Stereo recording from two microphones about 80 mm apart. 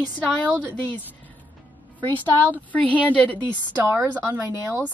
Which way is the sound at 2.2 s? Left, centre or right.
Centre.